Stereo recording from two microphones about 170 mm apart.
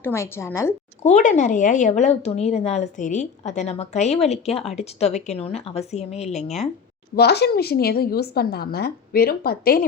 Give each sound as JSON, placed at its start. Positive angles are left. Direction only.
{"t": 0.0, "sound": "a woman's voice", "side_deg": 15}
{"t": 1.0, "sound": "speech", "side_deg": 45}
{"t": 7.2, "sound": "a woman's voice", "side_deg": 75}